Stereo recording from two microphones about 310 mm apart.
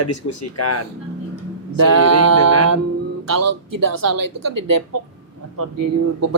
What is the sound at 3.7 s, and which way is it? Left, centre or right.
Speech, right.